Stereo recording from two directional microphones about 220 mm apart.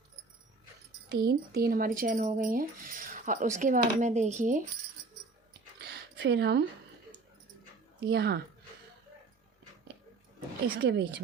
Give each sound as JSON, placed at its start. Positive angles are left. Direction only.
{"t": 1.3, "sound": "speech", "side_deg": -45}
{"t": 5.8, "sound": "a sound", "side_deg": -50}
{"t": 8.0, "sound": "a woman's voice", "side_deg": -45}
{"t": 10.8, "sound": "a woman's voice", "side_deg": -50}